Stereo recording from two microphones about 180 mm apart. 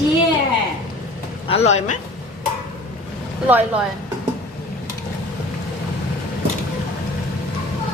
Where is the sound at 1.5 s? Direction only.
35° left (ahead or behind).